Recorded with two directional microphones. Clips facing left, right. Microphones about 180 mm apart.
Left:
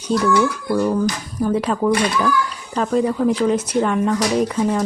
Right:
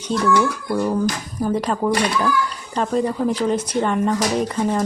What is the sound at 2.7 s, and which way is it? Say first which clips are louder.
Speech: left 2 dB; 5° left (ahead or behind).